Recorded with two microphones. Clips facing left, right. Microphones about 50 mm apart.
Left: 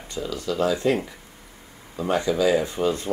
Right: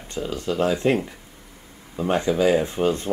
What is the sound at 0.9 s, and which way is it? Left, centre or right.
Speech, centre.